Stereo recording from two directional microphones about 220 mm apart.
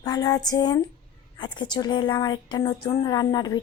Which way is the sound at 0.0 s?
15° left (ahead or behind).